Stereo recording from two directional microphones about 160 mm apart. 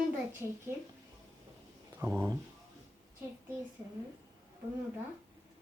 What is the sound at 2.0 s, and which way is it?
Speech, 15° right (ahead or behind).